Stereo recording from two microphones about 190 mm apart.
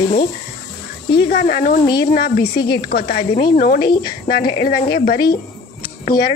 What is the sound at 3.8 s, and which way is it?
Speech, 25° left (ahead or behind).